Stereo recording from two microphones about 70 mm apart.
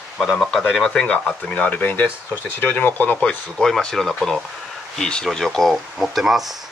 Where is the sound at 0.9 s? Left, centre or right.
Centre.